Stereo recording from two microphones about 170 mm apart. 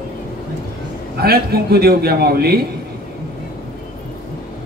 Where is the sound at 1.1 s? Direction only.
65° right (ahead or behind).